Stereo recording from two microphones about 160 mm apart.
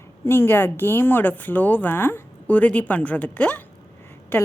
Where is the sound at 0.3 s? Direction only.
15° left (ahead or behind).